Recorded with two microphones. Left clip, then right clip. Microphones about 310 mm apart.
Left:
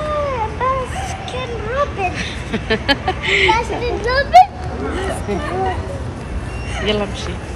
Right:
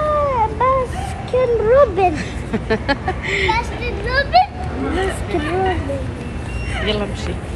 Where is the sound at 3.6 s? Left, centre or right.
Left.